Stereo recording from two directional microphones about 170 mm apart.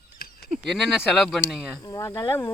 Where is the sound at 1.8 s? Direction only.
20° left (ahead or behind).